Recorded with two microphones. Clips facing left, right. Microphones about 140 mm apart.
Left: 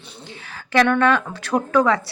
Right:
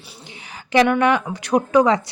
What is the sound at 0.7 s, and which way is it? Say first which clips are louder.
Speech: right 1 dB; 15° right (ahead or behind).